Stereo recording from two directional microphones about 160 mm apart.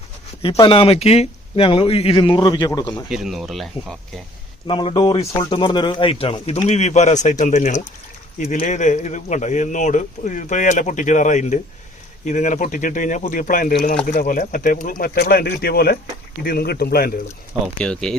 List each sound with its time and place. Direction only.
0.6 s speech: 35° left (ahead or behind)
3.1 s speech: centre (ahead or behind)
4.6 s speech: 30° left (ahead or behind); by 17.1 s 75° left (ahead or behind)
17.7 s speech: 5° left (ahead or behind)